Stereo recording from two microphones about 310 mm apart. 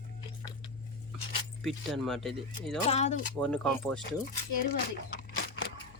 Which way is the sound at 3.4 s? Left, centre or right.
Centre.